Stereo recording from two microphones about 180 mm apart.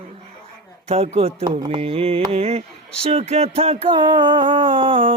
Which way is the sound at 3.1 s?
35° right (ahead or behind).